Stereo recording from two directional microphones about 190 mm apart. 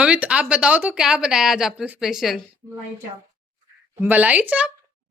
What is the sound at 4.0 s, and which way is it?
Speech, 10° right (ahead or behind).